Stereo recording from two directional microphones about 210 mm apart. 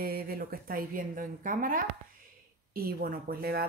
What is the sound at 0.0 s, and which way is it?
A woman's voice, 45° right (ahead or behind).